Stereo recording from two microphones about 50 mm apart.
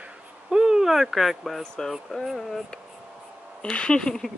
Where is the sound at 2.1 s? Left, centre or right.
Centre.